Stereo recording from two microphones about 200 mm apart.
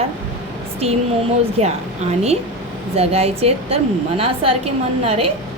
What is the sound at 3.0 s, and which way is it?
A woman's voice, 30° right (ahead or behind).